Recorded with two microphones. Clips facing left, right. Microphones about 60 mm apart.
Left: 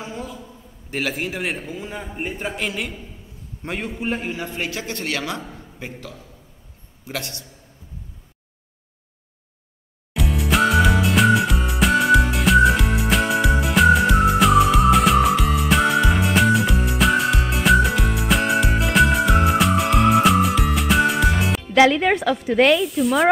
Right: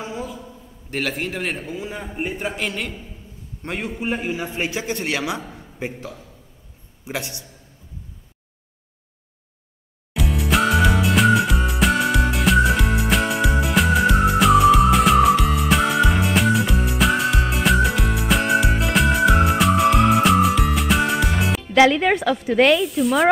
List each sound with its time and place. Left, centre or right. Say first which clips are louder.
0.0 s a sound: right 2 dB; centre
0.8 s a man's voice: even; centre
5.4 s a sound: even; centre
5.8 s a man's voice: right 6 dB; right
10.1 s music: even; centre
22.6 s a man's voice: even; centre